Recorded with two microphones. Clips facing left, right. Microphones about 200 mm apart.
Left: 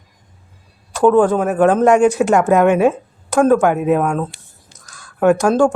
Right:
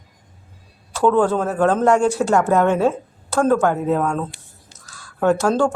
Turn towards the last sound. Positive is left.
turn(degrees=15)  # may be behind; listen again after turning